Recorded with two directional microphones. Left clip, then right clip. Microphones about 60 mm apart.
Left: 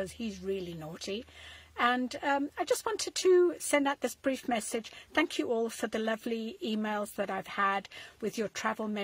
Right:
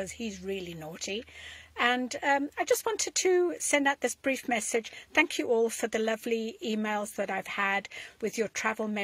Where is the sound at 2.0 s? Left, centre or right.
Left.